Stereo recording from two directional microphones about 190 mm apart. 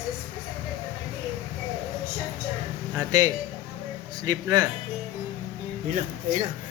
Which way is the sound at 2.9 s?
20° right (ahead or behind).